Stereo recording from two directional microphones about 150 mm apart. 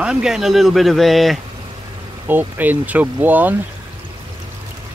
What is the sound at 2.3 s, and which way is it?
Speech, 10° right (ahead or behind).